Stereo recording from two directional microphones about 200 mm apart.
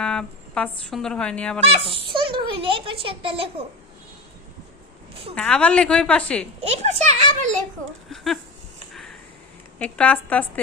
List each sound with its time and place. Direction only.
0.0 s speech: 5° left (ahead or behind)
1.7 s a child's voice: 30° right (ahead or behind)
5.3 s a woman's voice: 5° left (ahead or behind)
6.6 s a child's voice: 35° right (ahead or behind)
8.1 s a woman's voice: centre (ahead or behind)
8.9 s a sound: centre (ahead or behind)
9.7 s a woman's voice: 5° left (ahead or behind)